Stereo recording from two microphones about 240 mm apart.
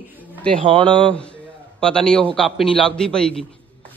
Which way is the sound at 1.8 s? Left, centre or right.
Centre.